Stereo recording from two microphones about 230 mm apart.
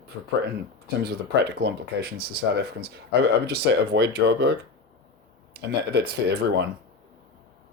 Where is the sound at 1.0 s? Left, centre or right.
Right.